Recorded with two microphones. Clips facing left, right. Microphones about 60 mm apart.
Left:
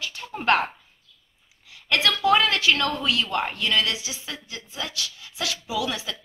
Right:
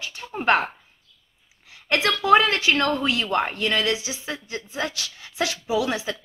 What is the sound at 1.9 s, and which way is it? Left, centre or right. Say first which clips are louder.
A woman's voice: right 3 dB; right.